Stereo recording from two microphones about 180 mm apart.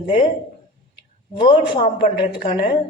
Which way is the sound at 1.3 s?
25° left (ahead or behind).